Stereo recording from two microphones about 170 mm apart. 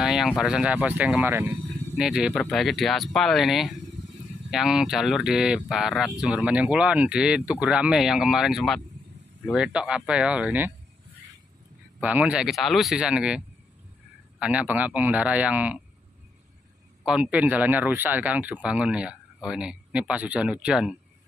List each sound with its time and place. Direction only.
0.0 s speech: centre (ahead or behind)
12.0 s speech: 10° right (ahead or behind)
14.4 s speech: 10° right (ahead or behind)
17.0 s speech: 5° right (ahead or behind)